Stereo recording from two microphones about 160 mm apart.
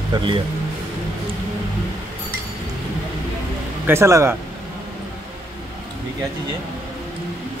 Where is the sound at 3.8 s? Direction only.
15° right (ahead or behind).